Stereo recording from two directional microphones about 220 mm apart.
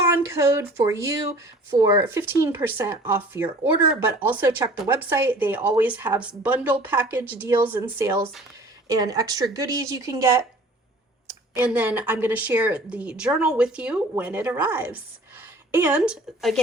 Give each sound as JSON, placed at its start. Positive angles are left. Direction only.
{"t": 0.1, "sound": "a woman's voice", "side_deg": -15}
{"t": 11.5, "sound": "a woman's voice", "side_deg": -5}